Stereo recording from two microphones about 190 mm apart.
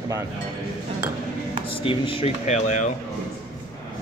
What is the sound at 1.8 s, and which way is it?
Speech, 25° left (ahead or behind).